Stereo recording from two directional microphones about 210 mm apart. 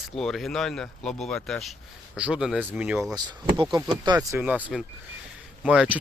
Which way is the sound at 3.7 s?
20° right (ahead or behind).